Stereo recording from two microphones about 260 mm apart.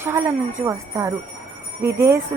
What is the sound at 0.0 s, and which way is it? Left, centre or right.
Jingle bell, centre.